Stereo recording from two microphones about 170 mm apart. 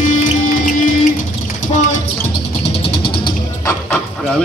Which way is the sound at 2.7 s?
35° left (ahead or behind).